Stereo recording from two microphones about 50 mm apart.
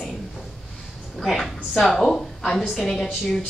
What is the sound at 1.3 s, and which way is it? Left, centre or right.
Speech, centre.